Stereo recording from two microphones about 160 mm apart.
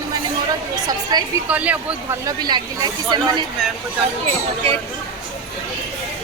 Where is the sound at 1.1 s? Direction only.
25° right (ahead or behind).